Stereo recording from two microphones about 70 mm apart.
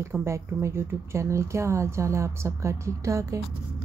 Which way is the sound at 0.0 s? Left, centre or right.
Right.